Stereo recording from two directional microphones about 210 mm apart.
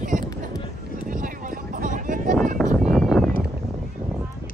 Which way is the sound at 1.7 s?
40° right (ahead or behind).